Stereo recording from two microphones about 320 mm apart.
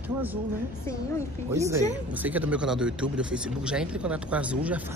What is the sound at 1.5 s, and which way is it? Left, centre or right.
Speech, centre.